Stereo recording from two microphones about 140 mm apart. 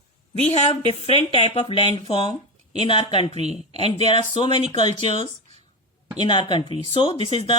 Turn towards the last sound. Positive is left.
turn(degrees=40)  # may be behind; listen again after turning